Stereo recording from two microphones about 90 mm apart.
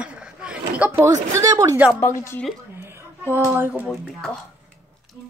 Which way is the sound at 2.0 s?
30° left (ahead or behind).